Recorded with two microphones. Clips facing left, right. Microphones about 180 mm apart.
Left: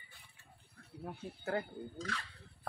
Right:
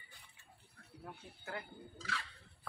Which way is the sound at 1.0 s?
35° left (ahead or behind).